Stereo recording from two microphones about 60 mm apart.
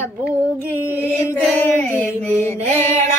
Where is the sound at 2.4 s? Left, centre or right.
Left.